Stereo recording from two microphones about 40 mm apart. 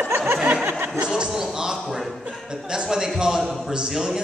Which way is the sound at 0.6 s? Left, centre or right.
Right.